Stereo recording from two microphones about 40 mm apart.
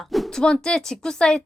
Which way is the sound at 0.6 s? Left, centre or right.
Centre.